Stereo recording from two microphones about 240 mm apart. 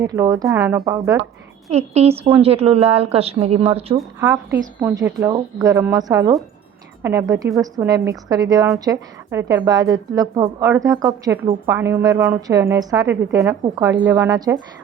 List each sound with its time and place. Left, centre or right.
0.0 s a woman's voice: centre
1.7 s a woman's voice: right
3.9 s a woman's voice: centre